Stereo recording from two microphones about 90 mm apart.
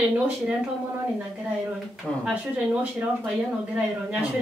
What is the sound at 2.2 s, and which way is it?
Speech, 15° right (ahead or behind).